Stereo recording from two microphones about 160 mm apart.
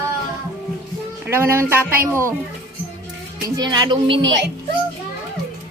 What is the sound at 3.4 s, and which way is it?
Speech, 25° right (ahead or behind).